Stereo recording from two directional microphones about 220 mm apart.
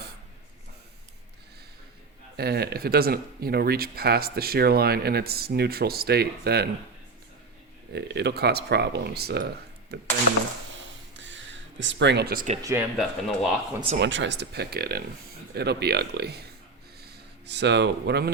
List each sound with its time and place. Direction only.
2.3 s speech: 45° right (ahead or behind)
7.9 s speech: 50° right (ahead or behind)
10.8 s a sound: 55° right (ahead or behind); by 12.5 s 40° right (ahead or behind)
12.6 s speech: 10° right (ahead or behind)
14.0 s speech: 55° right (ahead or behind)
17.4 s speech: 50° right (ahead or behind)